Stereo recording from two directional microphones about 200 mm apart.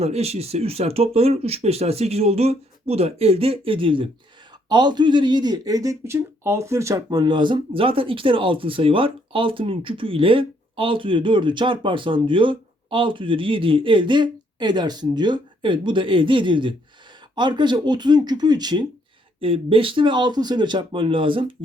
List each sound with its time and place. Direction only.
0.0 s speech: 30° right (ahead or behind)